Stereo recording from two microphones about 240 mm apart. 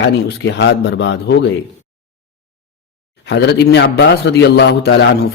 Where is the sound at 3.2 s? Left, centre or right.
Left.